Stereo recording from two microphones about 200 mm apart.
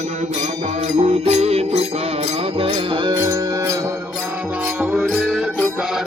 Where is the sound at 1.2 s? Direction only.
30° right (ahead or behind).